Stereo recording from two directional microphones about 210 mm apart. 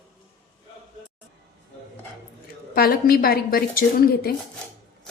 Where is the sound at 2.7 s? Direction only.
45° left (ahead or behind).